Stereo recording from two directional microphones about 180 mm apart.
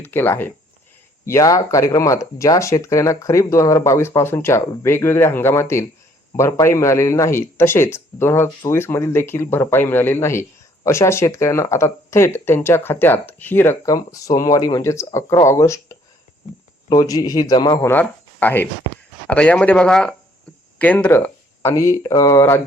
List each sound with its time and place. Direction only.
0.0 s a man's voice: 10° left (ahead or behind)
17.9 s speech: 10° left (ahead or behind)